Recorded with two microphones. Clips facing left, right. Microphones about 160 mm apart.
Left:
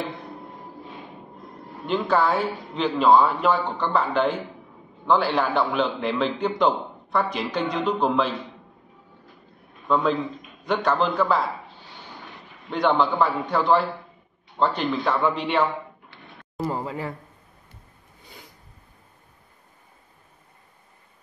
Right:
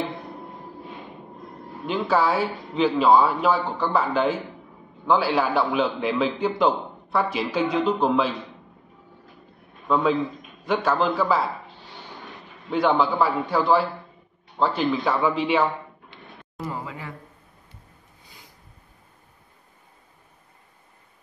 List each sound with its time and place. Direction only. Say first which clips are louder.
1.9 s a man's voice: even; 5° right (ahead or behind)
9.8 s a man's voice: right 1 dB; centre (ahead or behind)
12.7 s a man's voice: even; 5° right (ahead or behind)
16.5 s a man's voice: left 5 dB; 35° left (ahead or behind)